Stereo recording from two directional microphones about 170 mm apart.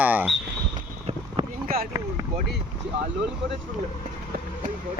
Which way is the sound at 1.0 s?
35° right (ahead or behind).